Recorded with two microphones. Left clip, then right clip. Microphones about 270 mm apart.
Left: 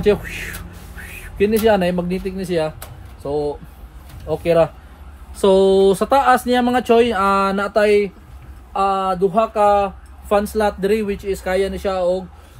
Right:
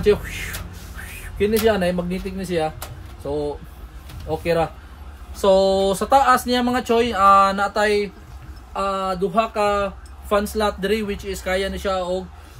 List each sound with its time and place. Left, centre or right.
0.0 s speech: left
4.3 s speech: left